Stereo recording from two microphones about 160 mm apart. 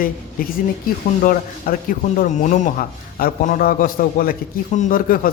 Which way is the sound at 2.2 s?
50° left (ahead or behind).